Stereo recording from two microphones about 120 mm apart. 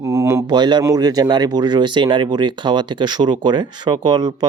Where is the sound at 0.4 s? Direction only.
35° right (ahead or behind).